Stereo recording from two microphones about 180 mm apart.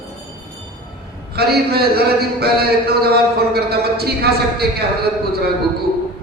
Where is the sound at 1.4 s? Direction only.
60° right (ahead or behind).